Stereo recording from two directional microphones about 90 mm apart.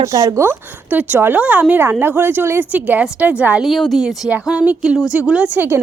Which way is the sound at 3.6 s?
Centre (ahead or behind).